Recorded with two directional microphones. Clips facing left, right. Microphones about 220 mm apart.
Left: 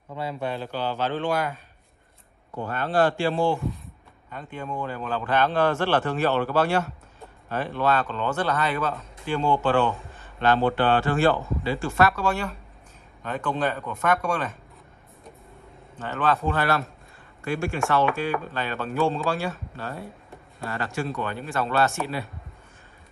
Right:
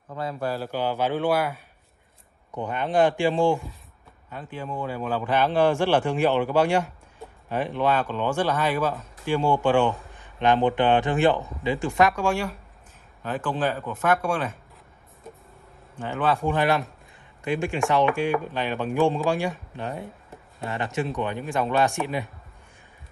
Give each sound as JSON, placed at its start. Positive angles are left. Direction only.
{"t": 0.1, "sound": "speech", "side_deg": -5}
{"t": 3.7, "sound": "speech", "side_deg": 0}
{"t": 16.0, "sound": "speech", "side_deg": -10}